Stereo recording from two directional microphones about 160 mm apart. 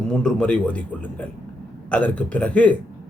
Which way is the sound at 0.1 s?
5° left (ahead or behind).